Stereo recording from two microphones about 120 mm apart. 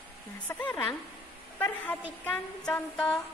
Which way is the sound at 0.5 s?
20° left (ahead or behind).